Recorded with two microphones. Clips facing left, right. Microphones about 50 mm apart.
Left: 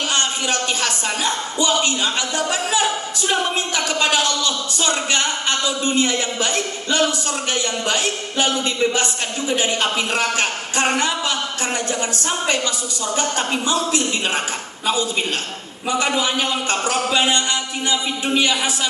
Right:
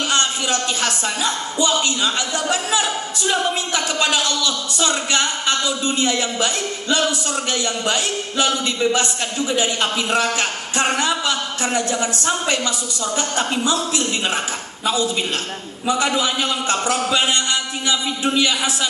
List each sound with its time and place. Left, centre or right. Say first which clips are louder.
0.8 s a man's voice: even; left
15.9 s a man's voice: right 1 dB; left